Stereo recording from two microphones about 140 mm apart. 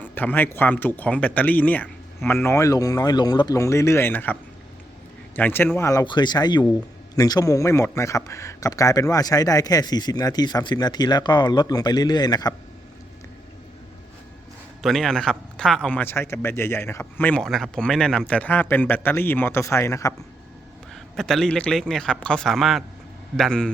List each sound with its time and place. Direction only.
0.0 s speech: 10° left (ahead or behind)
5.4 s speech: 15° left (ahead or behind)
6.1 s speech: 30° left (ahead or behind)
14.8 s speech: centre (ahead or behind); by 20.1 s 20° left (ahead or behind)
20.9 s a man's voice: centre (ahead or behind)